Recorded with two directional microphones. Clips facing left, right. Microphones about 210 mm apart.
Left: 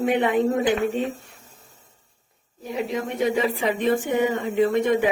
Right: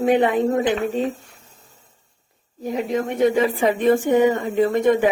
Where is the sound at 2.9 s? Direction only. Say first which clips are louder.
Right 5 dB; 50° right (ahead or behind).